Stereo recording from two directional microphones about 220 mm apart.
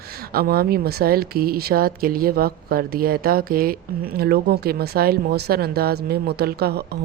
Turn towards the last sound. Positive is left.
turn(degrees=-45)  # may be behind; listen again after turning